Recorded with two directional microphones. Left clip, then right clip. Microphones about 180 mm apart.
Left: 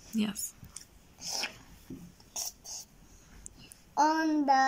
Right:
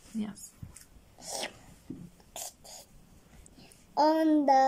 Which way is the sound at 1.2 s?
35° right (ahead or behind).